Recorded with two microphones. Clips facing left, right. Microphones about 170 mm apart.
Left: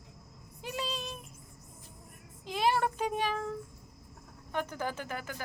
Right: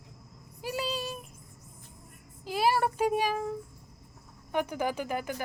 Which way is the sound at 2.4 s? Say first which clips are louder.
Right 2 dB; 5° right (ahead or behind).